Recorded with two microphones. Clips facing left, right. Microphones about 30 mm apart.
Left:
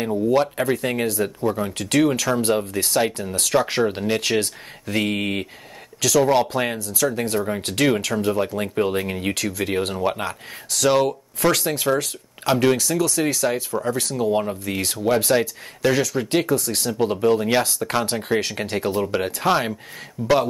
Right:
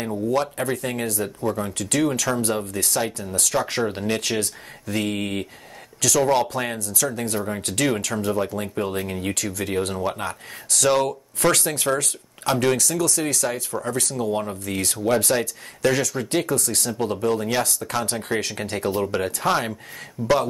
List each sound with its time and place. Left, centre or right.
0.0 s speech: centre
1.4 s speech: centre
1.7 s speech: left
3.6 s speech: centre
4.4 s speech: left
10.7 s speech: centre; by 20.3 s left